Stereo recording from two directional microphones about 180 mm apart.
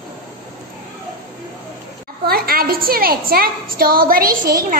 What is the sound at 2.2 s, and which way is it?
A woman's voice, 55° right (ahead or behind).